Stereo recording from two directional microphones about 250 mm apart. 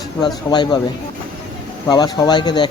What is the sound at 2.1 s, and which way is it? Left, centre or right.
Speech, centre.